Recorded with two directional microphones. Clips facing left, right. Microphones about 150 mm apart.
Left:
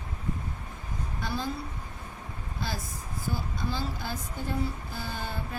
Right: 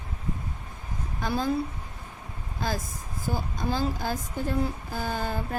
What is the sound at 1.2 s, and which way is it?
Speech, 50° right (ahead or behind).